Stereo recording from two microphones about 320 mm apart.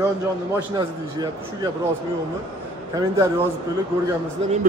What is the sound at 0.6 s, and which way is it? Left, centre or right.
A man's voice, centre.